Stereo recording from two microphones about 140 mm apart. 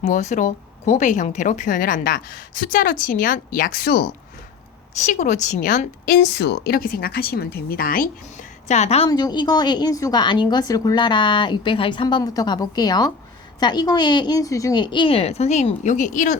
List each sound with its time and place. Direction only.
0.0 s a woman's voice: 60° left (ahead or behind); by 4.1 s 90° left
4.9 s a woman's voice: 60° left (ahead or behind)
6.7 s speech: 90° left; by 9.0 s 50° left (ahead or behind)
9.0 s a woman's voice: 30° left (ahead or behind); by 16.4 s 65° left (ahead or behind)